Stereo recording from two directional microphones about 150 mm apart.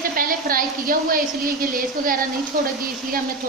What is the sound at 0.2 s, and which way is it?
A woman's voice, 70° right (ahead or behind).